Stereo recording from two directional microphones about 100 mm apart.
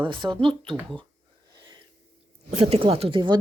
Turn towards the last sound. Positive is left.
turn(degrees=-55)  # may be behind; listen again after turning